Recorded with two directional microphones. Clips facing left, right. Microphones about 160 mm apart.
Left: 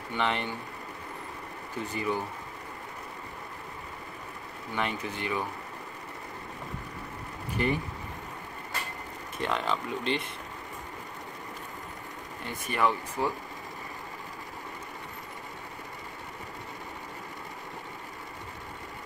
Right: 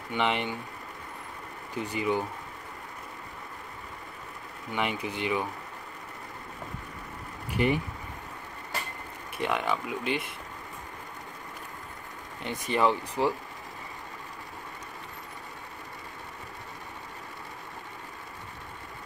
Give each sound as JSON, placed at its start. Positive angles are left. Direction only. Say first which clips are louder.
{"t": 0.1, "sound": "speech", "louder": "right 2 dB", "side_deg": -15}
{"t": 1.8, "sound": "speech", "louder": "right 3 dB", "side_deg": -15}
{"t": 4.7, "sound": "speech", "louder": "right 2 dB", "side_deg": -15}
{"t": 7.5, "sound": "speech", "louder": "right 3 dB", "side_deg": -15}
{"t": 9.4, "sound": "speech", "louder": "right 1 dB", "side_deg": -10}
{"t": 12.4, "sound": "speech", "louder": "right 3 dB", "side_deg": -20}